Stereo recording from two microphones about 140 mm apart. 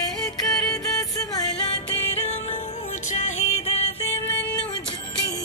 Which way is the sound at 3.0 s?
55° left (ahead or behind).